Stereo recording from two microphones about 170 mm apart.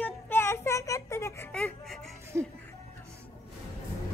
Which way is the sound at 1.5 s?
5° left (ahead or behind).